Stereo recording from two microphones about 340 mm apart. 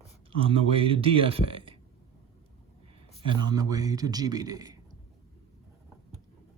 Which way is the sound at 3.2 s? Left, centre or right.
Centre.